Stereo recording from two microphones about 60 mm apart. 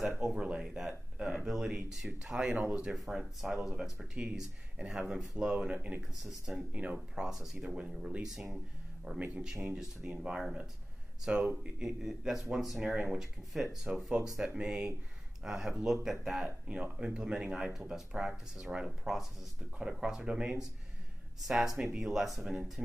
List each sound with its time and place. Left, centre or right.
0.2 s speech: centre
2.9 s speech: centre
12.8 s speech: centre